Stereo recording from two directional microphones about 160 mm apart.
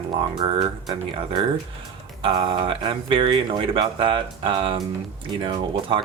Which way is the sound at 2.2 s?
30° right (ahead or behind).